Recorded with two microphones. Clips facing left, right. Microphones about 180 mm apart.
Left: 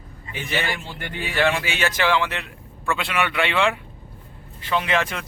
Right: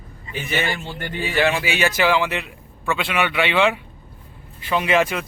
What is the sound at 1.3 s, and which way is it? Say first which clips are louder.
A man's voice: right 2 dB; 5° right (ahead or behind).